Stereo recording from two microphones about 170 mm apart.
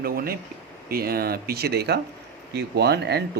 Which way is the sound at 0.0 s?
60° right (ahead or behind).